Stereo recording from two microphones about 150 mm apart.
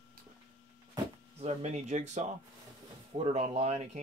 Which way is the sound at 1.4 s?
50° right (ahead or behind).